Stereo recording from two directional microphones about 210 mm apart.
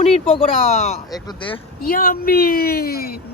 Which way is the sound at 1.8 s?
45° left (ahead or behind).